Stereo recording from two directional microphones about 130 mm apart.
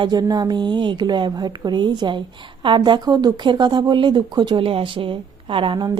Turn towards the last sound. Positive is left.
turn(degrees=-35)  # may be behind; listen again after turning